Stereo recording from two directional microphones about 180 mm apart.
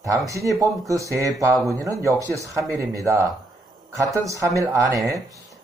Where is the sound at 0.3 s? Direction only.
15° right (ahead or behind).